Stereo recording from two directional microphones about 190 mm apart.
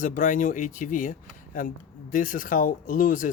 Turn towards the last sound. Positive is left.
turn(degrees=45)  # may be behind; listen again after turning